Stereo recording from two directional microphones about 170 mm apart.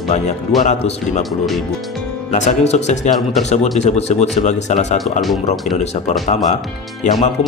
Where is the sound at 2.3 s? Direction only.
40° left (ahead or behind).